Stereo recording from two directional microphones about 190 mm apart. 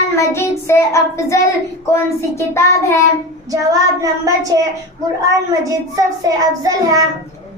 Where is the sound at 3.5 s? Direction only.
20° right (ahead or behind).